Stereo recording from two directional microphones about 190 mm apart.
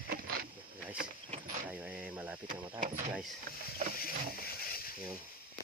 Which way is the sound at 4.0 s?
50° left (ahead or behind).